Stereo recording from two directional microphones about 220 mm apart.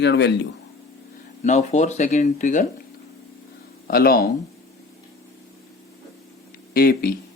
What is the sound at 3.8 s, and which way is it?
Speech, 45° left (ahead or behind).